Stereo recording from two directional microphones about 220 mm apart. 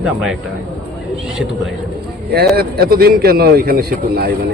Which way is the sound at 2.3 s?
45° right (ahead or behind).